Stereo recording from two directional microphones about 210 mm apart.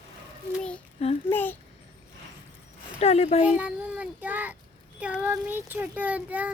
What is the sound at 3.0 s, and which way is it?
Speech, 30° left (ahead or behind).